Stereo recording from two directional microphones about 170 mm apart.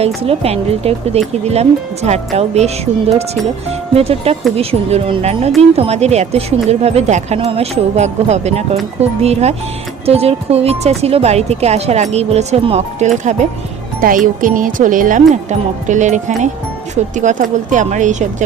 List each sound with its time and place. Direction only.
0.0 s speech: 35° right (ahead or behind)
14.0 s speech: 55° right (ahead or behind)